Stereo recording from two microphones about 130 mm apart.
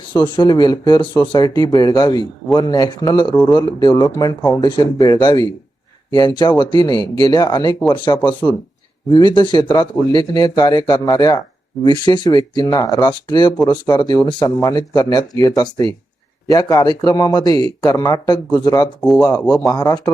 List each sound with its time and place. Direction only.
0.1 s speech: 35° left (ahead or behind)
19.0 s speech: 5° left (ahead or behind)
19.6 s speech: 30° left (ahead or behind)